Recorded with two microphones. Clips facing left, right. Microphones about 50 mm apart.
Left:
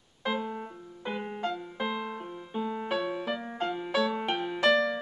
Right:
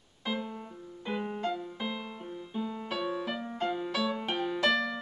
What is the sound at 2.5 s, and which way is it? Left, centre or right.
Music, centre.